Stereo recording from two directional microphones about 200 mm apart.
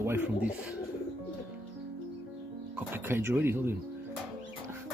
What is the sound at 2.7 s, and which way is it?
Speech, 10° right (ahead or behind).